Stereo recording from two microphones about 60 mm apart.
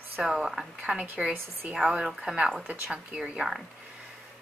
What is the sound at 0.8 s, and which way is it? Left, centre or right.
Speech, centre.